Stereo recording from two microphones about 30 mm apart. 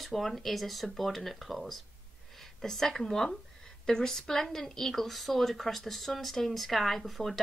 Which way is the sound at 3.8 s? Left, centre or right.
Left.